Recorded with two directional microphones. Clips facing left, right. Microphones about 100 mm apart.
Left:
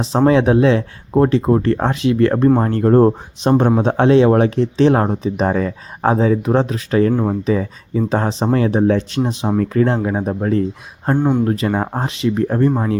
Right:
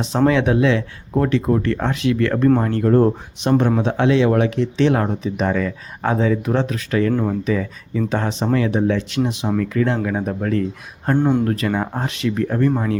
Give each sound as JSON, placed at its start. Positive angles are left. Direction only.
{"t": 0.3, "sound": "speech", "side_deg": 30}
{"t": 3.1, "sound": "speech", "side_deg": 25}
{"t": 3.8, "sound": "speech", "side_deg": 40}
{"t": 7.1, "sound": "speech", "side_deg": 15}
{"t": 7.4, "sound": "speech", "side_deg": 30}
{"t": 11.1, "sound": "speech", "side_deg": 10}
{"t": 11.7, "sound": "speech", "side_deg": 25}